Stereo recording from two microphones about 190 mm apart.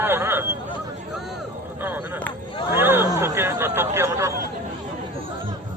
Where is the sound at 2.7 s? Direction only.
10° right (ahead or behind).